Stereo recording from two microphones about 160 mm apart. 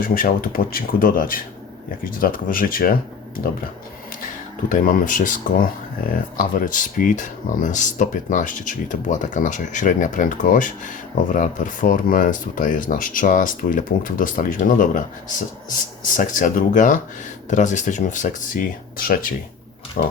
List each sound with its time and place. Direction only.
0.0 s speech: 60° left (ahead or behind)
4.7 s speech: 55° left (ahead or behind)
20.0 s pig: 75° left (ahead or behind)